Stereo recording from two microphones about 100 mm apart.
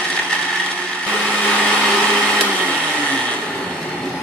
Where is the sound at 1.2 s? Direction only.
10° left (ahead or behind).